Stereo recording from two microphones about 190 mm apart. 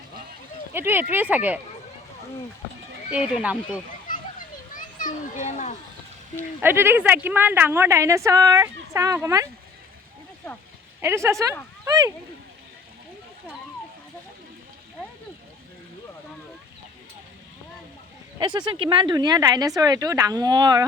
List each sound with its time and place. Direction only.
0.7 s a woman's voice: 10° right (ahead or behind)
3.1 s a woman's voice: 5° right (ahead or behind)
4.7 s a child's voice: 45° left (ahead or behind)
6.6 s a woman's voice: 10° right (ahead or behind)
11.0 s a woman's voice: 15° right (ahead or behind)
18.3 s speech: 25° right (ahead or behind)